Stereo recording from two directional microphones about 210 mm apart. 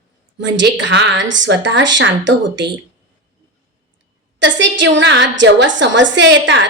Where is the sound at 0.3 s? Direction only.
60° right (ahead or behind).